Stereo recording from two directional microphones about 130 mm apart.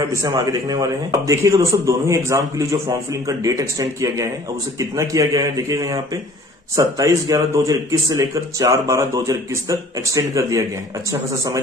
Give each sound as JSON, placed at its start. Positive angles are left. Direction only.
{"t": 0.1, "sound": "a man's voice", "side_deg": -25}